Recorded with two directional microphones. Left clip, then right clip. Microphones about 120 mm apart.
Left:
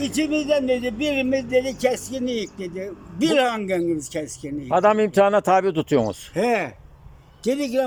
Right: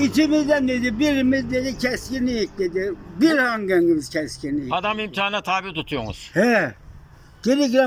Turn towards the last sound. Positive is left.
turn(degrees=0)  # may be behind; listen again after turning